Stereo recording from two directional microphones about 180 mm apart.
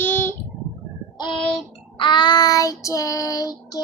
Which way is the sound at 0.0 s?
10° left (ahead or behind).